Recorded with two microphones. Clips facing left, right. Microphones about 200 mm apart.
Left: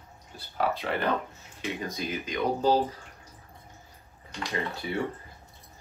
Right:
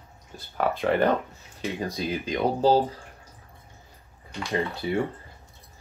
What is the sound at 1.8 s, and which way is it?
Speech, 30° right (ahead or behind).